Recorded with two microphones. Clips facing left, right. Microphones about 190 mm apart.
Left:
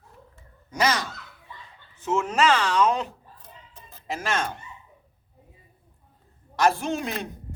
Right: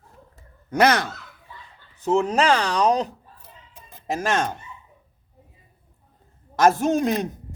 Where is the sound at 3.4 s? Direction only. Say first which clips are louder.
Even; 15° right (ahead or behind).